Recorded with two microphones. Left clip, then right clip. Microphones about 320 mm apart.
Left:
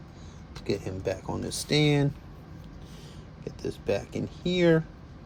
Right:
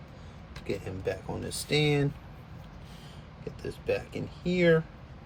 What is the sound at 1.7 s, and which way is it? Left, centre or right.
Speech, centre.